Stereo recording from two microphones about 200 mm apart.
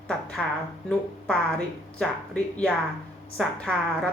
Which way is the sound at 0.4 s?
5° left (ahead or behind).